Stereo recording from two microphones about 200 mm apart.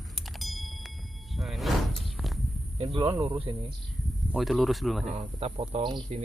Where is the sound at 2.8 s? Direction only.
30° right (ahead or behind).